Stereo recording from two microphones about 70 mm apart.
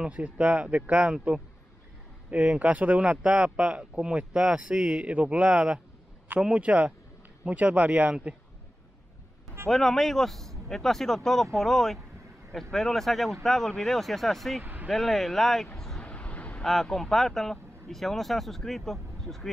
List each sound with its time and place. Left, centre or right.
0.0 s a man's voice: centre
9.7 s speech: centre
14.6 s vehicle: right
14.9 s speech: centre
16.0 s vehicle: centre
16.6 s speech: centre